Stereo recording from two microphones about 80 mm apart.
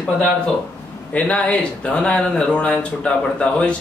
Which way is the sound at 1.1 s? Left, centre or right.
Centre.